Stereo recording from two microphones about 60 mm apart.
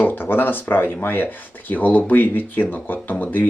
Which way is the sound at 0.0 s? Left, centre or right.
Left.